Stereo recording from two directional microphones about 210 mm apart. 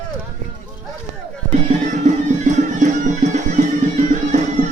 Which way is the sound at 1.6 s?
35° right (ahead or behind).